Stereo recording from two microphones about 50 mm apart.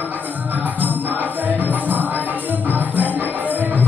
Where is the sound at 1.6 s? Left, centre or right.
Right.